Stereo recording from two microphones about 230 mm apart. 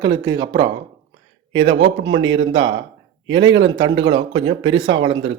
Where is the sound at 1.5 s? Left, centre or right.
Right.